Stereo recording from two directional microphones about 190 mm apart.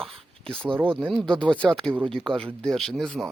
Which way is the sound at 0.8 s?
10° right (ahead or behind).